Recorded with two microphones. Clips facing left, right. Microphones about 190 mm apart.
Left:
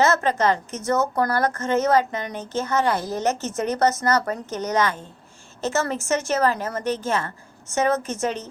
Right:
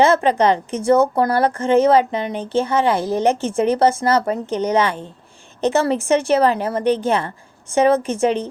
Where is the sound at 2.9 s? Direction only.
30° right (ahead or behind).